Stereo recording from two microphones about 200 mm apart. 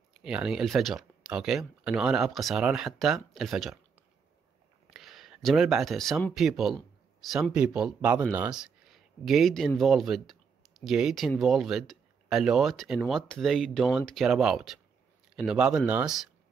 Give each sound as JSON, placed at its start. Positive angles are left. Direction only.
{"t": 0.1, "sound": "speech", "side_deg": -5}
{"t": 4.9, "sound": "a man's voice", "side_deg": 0}